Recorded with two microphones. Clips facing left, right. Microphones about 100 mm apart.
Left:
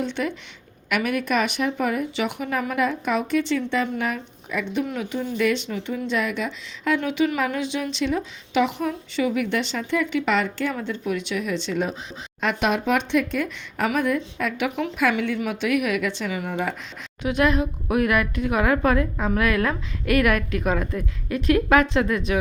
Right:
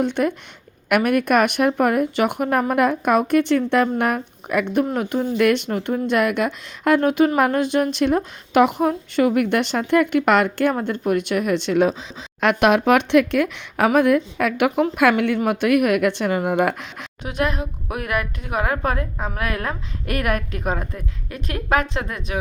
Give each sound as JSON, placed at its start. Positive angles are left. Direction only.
{"t": 0.0, "sound": "speech", "side_deg": -50}
{"t": 17.2, "sound": "a woman's voice", "side_deg": -45}